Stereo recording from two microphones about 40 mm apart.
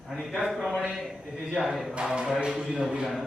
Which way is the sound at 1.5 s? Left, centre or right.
Centre.